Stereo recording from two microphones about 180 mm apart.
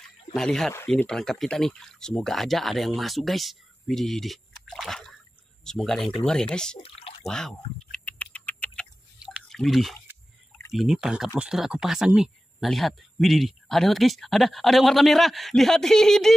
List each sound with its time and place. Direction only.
0.3 s speech: 5° left (ahead or behind)
6.8 s a sound: 35° left (ahead or behind)
7.2 s typing: 5° left (ahead or behind)
9.2 s drip: centre (ahead or behind)
10.7 s speech: centre (ahead or behind)